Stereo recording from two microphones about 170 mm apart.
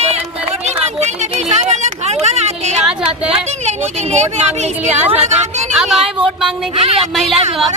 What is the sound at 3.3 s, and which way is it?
Speech, 40° right (ahead or behind).